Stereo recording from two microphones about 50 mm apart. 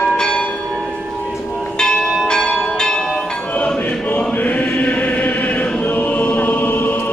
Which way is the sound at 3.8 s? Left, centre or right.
Left.